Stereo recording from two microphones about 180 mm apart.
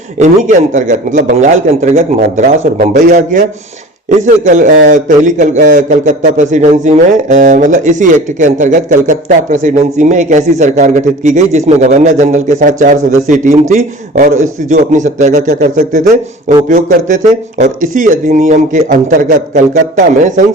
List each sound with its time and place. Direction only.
0.2 s a man's voice: 45° right (ahead or behind)
4.4 s a man's voice: 45° right (ahead or behind)